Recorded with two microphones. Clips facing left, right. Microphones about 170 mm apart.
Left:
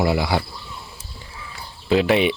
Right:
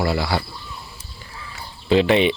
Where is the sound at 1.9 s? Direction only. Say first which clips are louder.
Right 1 dB; 5° left (ahead or behind).